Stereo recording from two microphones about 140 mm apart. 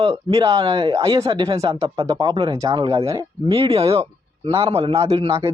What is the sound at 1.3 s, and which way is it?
Speech, 40° right (ahead or behind).